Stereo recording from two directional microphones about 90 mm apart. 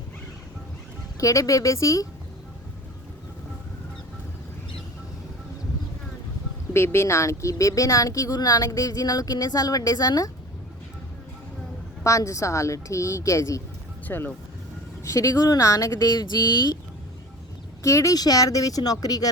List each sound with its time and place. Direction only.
1.2 s a woman's voice: 35° left (ahead or behind)
6.7 s a woman's voice: 30° left (ahead or behind)
12.0 s a woman's voice: 35° left (ahead or behind)
14.1 s speech: 25° left (ahead or behind)
15.0 s a woman's voice: 35° left (ahead or behind)
17.8 s a woman's voice: 35° left (ahead or behind)